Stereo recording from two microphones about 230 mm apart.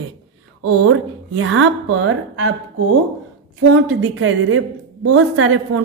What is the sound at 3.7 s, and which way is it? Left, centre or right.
Speech, right.